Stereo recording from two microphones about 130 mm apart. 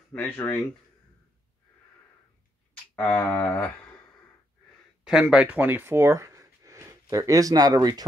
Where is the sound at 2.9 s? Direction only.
10° left (ahead or behind).